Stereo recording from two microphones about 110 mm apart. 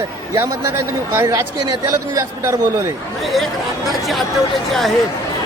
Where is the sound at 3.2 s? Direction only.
Centre (ahead or behind).